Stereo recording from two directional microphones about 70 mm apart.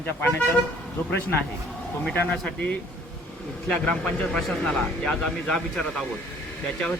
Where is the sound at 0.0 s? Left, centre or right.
Left.